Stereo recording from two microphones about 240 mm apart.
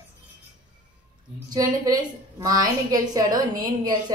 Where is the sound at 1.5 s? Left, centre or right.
Centre.